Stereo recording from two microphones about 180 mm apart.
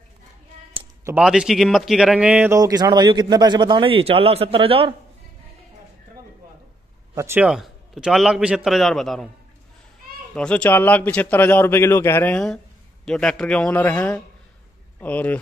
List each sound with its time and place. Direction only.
1.1 s a man's voice: 5° right (ahead or behind)
2.6 s a man's voice: 20° right (ahead or behind)
7.2 s speech: 15° right (ahead or behind)
7.4 s a man's voice: centre (ahead or behind)
10.3 s speech: 5° left (ahead or behind)